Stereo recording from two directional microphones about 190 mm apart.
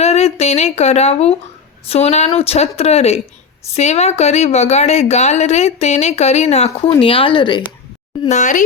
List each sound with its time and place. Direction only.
0.0 s speech: 35° left (ahead or behind)
8.3 s speech: 40° left (ahead or behind)